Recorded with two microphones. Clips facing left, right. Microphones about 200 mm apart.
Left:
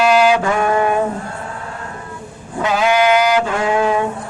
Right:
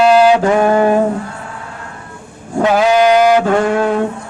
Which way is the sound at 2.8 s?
40° right (ahead or behind).